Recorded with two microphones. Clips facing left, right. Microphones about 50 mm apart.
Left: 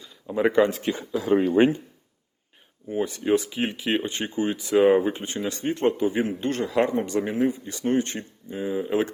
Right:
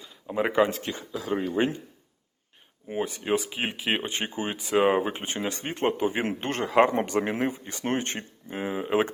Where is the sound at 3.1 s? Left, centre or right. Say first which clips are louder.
Left 6 dB; centre; by 9.1 s right.